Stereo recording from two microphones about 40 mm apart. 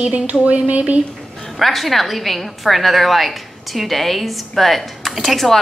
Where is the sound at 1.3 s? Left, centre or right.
Centre.